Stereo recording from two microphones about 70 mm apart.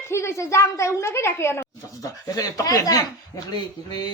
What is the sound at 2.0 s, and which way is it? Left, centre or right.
Speech, left.